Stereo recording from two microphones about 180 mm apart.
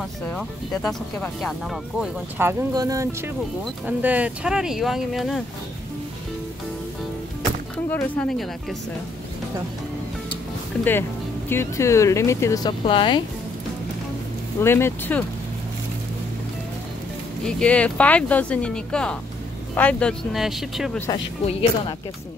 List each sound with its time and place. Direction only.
0.3 s speech: 5° left (ahead or behind)
2.3 s speech: 15° right (ahead or behind); by 5.4 s centre (ahead or behind)
7.9 s speech: 5° left (ahead or behind)
10.8 s speech: 10° left (ahead or behind); by 13.2 s 30° left (ahead or behind)
14.6 s speech: 15° left (ahead or behind)
17.5 s speech: 5° left (ahead or behind)
21.5 s speech: 30° left (ahead or behind)